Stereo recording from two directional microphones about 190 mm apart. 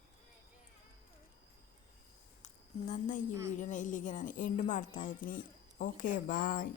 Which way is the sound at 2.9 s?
40° left (ahead or behind).